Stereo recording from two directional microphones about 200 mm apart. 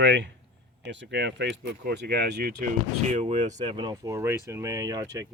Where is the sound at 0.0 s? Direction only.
60° right (ahead or behind).